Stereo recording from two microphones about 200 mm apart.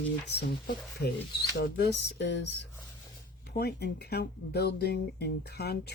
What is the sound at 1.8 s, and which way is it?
Speech, 55° left (ahead or behind).